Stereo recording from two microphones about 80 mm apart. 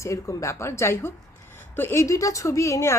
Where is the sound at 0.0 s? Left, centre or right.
Left.